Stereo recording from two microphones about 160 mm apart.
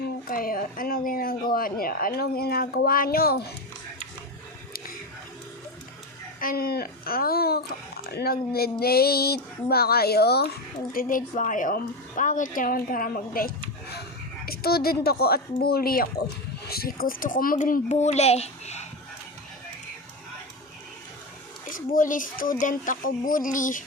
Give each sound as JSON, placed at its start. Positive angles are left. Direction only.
{"t": 0.3, "sound": "speech", "side_deg": 65}
{"t": 6.4, "sound": "speech", "side_deg": 65}
{"t": 10.9, "sound": "speech", "side_deg": 55}
{"t": 21.7, "sound": "speech", "side_deg": 55}